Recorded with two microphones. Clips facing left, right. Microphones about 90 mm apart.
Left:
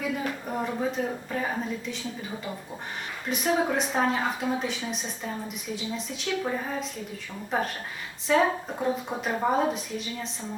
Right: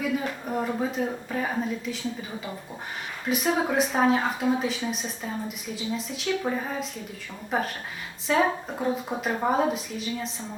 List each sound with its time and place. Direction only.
0.0 s speech: centre (ahead or behind)
3.2 s speech: centre (ahead or behind)